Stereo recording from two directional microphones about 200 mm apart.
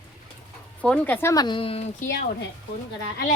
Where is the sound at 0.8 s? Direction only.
5° left (ahead or behind); by 1.9 s 30° left (ahead or behind).